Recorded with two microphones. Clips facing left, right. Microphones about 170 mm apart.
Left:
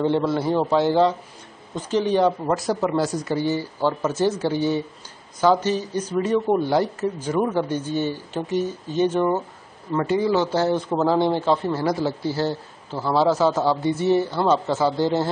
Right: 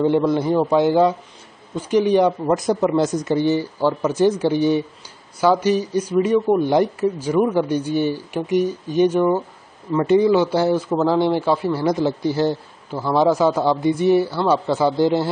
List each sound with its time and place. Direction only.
0.3 s speech: 15° right (ahead or behind)
10.9 s speech: 10° left (ahead or behind)
11.3 s speech: 10° right (ahead or behind)